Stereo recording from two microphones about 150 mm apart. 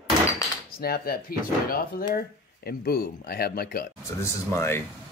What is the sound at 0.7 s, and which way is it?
Speech, 90° left.